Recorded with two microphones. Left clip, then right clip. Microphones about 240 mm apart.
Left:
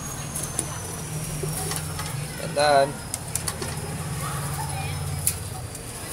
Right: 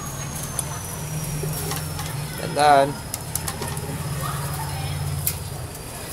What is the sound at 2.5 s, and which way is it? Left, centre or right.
Speech, right.